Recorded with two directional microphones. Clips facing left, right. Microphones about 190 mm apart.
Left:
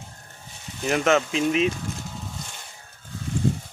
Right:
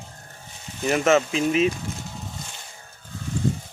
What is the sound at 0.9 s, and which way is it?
Speech, centre (ahead or behind).